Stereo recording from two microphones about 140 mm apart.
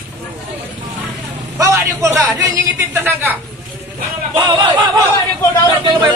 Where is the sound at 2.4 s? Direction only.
20° right (ahead or behind).